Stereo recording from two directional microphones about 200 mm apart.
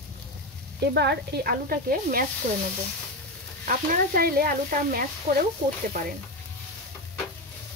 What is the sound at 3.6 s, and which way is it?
Speech, 45° right (ahead or behind).